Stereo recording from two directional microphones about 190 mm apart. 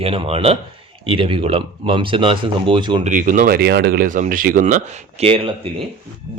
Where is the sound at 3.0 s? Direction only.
45° right (ahead or behind).